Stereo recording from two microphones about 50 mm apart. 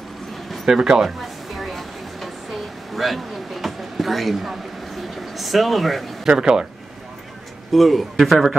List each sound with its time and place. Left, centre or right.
0.5 s a sound: centre
6.2 s speech: centre
7.7 s a man's voice: centre